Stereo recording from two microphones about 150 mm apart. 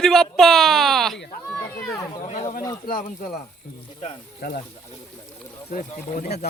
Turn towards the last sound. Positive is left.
turn(degrees=90)